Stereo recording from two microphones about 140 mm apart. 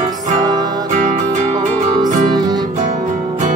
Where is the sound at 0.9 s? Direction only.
60° right (ahead or behind).